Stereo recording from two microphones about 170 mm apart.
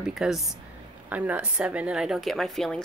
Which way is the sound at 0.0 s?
5° right (ahead or behind).